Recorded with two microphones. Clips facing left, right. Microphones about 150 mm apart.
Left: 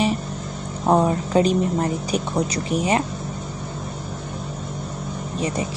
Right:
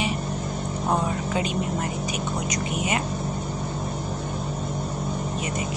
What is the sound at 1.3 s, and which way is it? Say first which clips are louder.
A woman's voice: left 7 dB; 40° left (ahead or behind).